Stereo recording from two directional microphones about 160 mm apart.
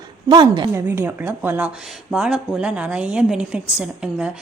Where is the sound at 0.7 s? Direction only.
15° right (ahead or behind).